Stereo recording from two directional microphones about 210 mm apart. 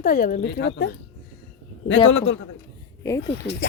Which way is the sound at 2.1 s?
65° left (ahead or behind).